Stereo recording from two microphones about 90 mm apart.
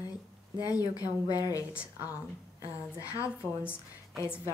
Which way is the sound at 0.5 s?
40° left (ahead or behind).